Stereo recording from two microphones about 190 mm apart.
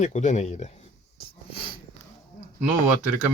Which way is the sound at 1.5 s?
25° left (ahead or behind).